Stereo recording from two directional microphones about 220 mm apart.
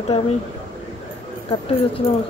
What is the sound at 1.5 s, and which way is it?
Speech, 25° left (ahead or behind).